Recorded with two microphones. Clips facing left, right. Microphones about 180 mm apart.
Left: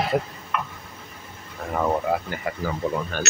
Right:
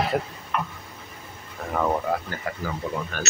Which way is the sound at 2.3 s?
15° left (ahead or behind).